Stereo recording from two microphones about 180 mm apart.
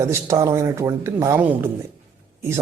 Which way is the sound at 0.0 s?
15° right (ahead or behind).